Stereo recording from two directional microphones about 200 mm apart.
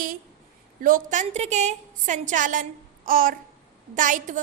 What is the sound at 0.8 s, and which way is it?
A woman's voice, 40° right (ahead or behind).